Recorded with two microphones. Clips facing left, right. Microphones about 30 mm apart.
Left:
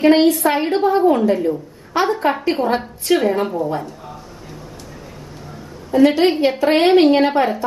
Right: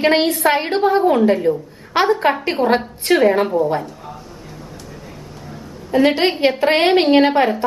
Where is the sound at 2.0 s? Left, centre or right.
Right.